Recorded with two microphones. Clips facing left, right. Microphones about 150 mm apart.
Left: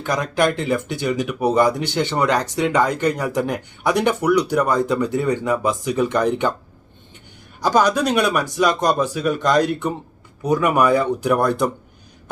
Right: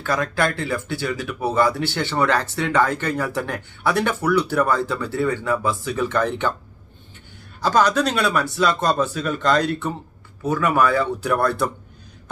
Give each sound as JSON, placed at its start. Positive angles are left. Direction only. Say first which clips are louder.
{"t": 0.0, "sound": "speech", "louder": "left 3 dB", "side_deg": 15}
{"t": 7.6, "sound": "speech", "louder": "left 1 dB", "side_deg": 15}